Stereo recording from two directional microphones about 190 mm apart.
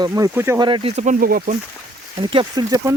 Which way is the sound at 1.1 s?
50° right (ahead or behind).